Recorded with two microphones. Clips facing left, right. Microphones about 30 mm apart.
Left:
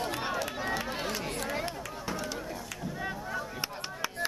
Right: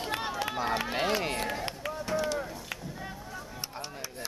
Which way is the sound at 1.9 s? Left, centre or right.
Centre.